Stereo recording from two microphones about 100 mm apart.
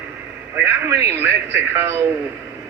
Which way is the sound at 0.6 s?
25° right (ahead or behind).